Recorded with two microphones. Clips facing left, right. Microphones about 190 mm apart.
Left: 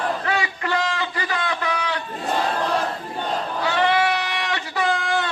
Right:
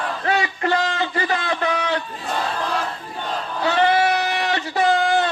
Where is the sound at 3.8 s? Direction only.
45° right (ahead or behind).